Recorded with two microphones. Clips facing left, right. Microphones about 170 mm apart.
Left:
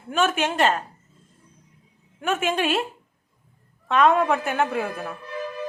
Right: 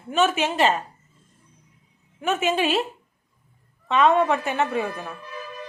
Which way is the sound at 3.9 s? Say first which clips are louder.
Even; centre (ahead or behind).